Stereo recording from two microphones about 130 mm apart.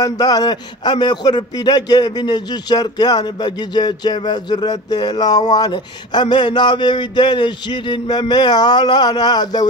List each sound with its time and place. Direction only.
0.0 s a man's voice: 30° left (ahead or behind)